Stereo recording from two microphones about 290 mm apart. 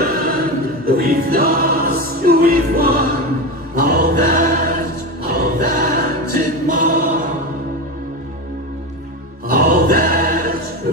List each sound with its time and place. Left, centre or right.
0.0 s choir: right
6.8 s chant: right
9.5 s choir: right